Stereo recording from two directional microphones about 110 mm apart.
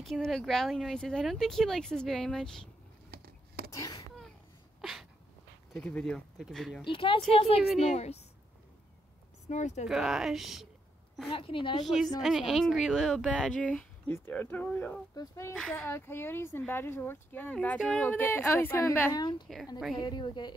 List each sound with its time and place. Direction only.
0.0 s speech: 5° left (ahead or behind)
3.7 s speech: 35° left (ahead or behind)
5.7 s speech: 10° left (ahead or behind)
6.8 s a woman's voice: 50° left (ahead or behind)
7.8 s a woman's voice: 85° left
9.5 s speech: 90° left
9.8 s speech: 5° right (ahead or behind)
11.3 s a woman's voice: 50° left (ahead or behind)
11.8 s speech: centre (ahead or behind)
14.1 s speech: 20° left (ahead or behind)
15.1 s speech: 30° left (ahead or behind)
19.1 s a woman's voice: 45° left (ahead or behind)